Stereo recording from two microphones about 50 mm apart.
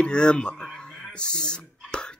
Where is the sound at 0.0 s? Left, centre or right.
Centre.